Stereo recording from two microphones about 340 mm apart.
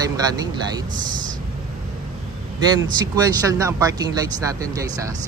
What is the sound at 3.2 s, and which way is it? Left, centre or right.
Speech, centre.